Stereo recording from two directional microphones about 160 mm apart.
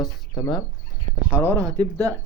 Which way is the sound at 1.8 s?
20° right (ahead or behind).